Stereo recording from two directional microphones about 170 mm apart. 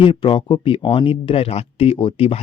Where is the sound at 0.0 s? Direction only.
30° left (ahead or behind).